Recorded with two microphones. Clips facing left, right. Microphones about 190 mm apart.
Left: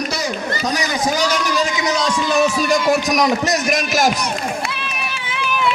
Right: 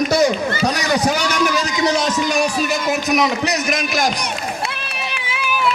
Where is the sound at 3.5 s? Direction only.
Centre (ahead or behind).